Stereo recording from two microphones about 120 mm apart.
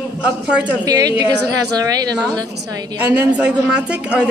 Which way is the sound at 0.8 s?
30° right (ahead or behind).